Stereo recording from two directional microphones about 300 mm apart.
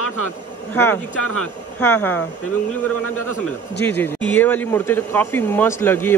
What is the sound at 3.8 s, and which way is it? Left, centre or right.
Speech, centre.